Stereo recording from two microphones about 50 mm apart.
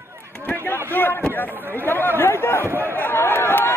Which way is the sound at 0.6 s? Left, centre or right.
Left.